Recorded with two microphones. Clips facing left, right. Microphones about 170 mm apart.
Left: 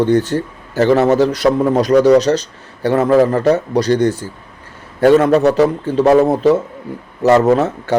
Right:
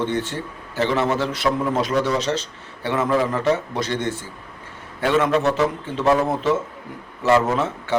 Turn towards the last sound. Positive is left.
turn(degrees=40)  # may be behind; listen again after turning